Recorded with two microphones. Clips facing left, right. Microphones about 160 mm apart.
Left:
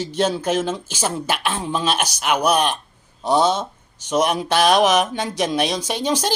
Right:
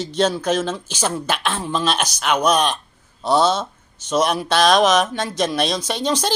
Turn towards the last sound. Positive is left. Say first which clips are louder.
# even
turn(degrees=10)  # may be behind; listen again after turning